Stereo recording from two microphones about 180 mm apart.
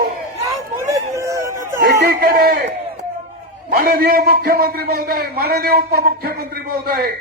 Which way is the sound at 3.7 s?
60° right (ahead or behind).